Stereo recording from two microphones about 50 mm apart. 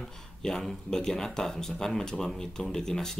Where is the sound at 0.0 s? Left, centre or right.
Centre.